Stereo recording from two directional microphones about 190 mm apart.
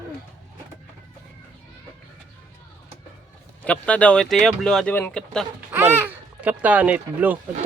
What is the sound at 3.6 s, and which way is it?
Speech, 5° left (ahead or behind).